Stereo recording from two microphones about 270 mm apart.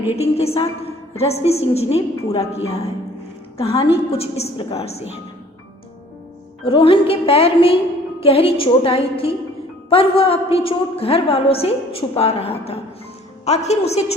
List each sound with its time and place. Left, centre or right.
0.2 s a woman's voice: left
6.7 s a woman's voice: centre